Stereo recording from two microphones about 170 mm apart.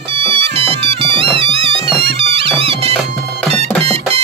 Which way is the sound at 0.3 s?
30° right (ahead or behind).